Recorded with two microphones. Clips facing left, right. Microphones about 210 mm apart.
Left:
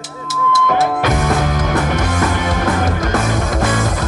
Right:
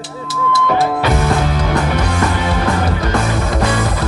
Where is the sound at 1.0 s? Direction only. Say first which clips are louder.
Right 1 dB; 45° left (ahead or behind).